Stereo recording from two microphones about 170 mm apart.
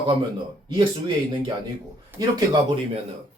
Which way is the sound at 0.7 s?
30° right (ahead or behind).